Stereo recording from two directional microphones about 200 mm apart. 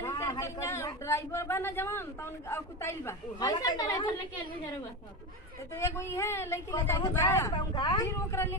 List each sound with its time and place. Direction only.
0.0 s speech: 15° left (ahead or behind)
5.8 s speech: 15° left (ahead or behind)